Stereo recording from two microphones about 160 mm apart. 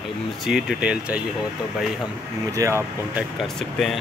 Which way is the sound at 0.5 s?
Centre (ahead or behind).